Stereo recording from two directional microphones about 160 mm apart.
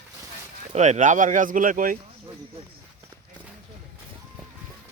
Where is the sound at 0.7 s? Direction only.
45° right (ahead or behind).